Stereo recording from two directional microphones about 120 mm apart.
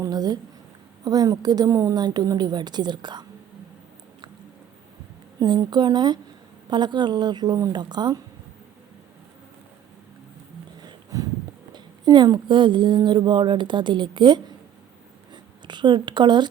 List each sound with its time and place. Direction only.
0.0 s speech: 35° right (ahead or behind)
5.4 s speech: 35° right (ahead or behind)
10.8 s a sound: 30° right (ahead or behind)
11.7 s speech: 35° right (ahead or behind)